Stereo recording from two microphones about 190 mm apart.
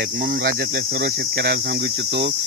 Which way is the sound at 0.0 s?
60° right (ahead or behind).